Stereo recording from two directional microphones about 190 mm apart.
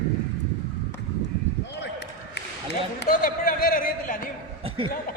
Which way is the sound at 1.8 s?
65° left (ahead or behind).